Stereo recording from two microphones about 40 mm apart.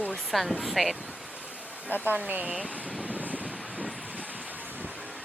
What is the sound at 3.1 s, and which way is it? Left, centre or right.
Vehicle, right.